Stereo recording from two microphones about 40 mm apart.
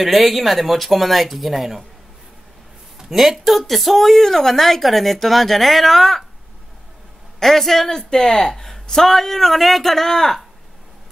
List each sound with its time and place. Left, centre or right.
0.0 s speech: centre
3.1 s speech: centre
7.3 s speech: centre